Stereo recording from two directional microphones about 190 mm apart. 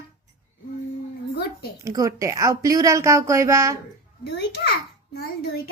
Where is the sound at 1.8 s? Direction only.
15° right (ahead or behind).